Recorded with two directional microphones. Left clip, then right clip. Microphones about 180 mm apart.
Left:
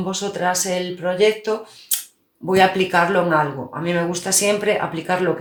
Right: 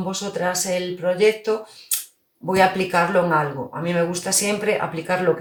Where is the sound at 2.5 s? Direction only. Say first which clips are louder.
Left 2 dB; 30° left (ahead or behind).